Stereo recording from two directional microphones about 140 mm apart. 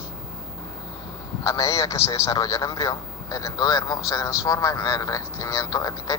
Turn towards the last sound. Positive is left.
turn(degrees=25)  # may be behind; listen again after turning